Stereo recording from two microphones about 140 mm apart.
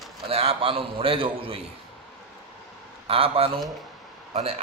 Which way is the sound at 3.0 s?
40° right (ahead or behind).